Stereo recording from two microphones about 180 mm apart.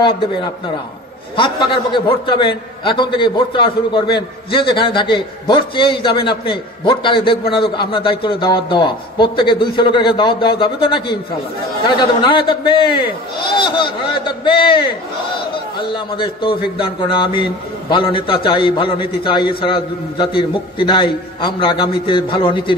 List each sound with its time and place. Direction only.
1.3 s a man's voice: 25° left (ahead or behind)